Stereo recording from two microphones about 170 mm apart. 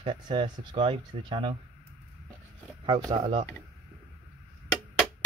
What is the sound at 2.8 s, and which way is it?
Speech, 30° right (ahead or behind).